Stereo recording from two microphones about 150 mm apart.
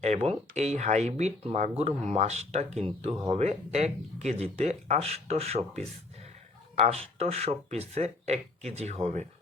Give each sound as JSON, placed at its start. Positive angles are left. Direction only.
{"t": 0.0, "sound": "speech", "side_deg": -50}